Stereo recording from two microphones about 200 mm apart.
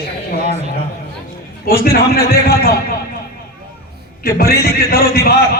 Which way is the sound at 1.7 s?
50° left (ahead or behind).